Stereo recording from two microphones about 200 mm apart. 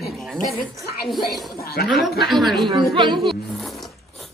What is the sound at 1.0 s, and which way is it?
Speech, centre (ahead or behind).